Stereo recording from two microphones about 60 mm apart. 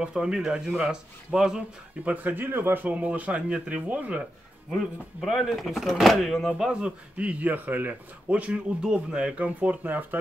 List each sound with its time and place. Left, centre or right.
0.0 s speech: centre
2.0 s speech: right
2.9 s speech: right
4.6 s speech: centre
6.7 s speech: centre